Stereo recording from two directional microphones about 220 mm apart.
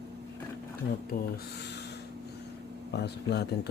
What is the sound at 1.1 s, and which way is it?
Speech, 40° left (ahead or behind).